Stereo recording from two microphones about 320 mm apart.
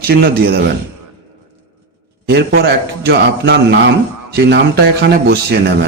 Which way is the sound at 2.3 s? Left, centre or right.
Right.